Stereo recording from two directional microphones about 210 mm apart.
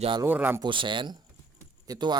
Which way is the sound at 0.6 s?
25° right (ahead or behind).